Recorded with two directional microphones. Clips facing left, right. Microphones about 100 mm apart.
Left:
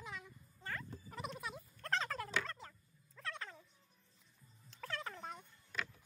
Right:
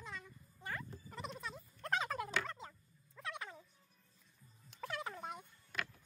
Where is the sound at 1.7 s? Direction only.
15° right (ahead or behind).